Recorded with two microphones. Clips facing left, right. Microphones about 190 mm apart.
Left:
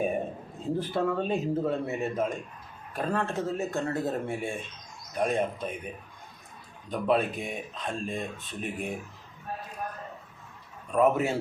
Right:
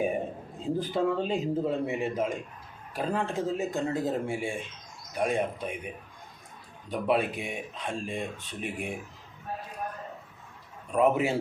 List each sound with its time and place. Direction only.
0.6 s speech: 15° right (ahead or behind)
6.9 s speech: 10° right (ahead or behind)
10.9 s speech: 10° right (ahead or behind)